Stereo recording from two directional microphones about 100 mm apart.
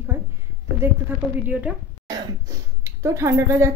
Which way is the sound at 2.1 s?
30° right (ahead or behind).